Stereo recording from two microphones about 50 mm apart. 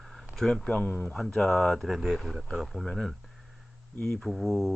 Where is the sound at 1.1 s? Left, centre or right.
Centre.